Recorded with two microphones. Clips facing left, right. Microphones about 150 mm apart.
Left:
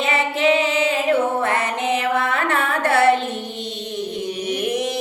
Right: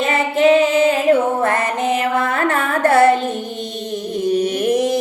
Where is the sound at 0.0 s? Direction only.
45° right (ahead or behind).